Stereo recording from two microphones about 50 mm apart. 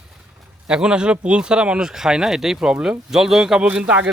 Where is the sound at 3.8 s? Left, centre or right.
Right.